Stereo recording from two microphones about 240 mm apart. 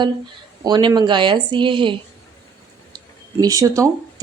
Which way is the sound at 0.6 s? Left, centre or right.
Centre.